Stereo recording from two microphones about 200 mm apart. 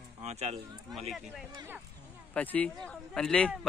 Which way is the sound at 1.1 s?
Centre (ahead or behind).